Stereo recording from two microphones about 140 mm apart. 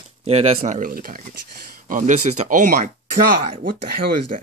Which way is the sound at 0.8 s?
90° right.